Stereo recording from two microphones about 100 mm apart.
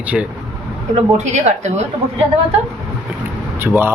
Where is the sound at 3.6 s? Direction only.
20° right (ahead or behind).